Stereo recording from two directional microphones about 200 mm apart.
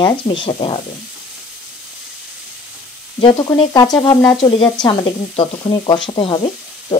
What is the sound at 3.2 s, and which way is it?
Speech, 25° left (ahead or behind).